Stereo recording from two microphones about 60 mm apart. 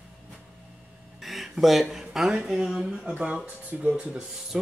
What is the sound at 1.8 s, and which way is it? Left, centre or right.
Speech, centre.